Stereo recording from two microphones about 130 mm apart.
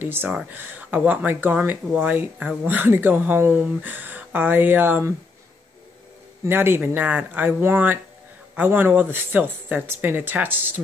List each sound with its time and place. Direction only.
0.0 s speech: 15° right (ahead or behind)
6.4 s speech: 15° right (ahead or behind)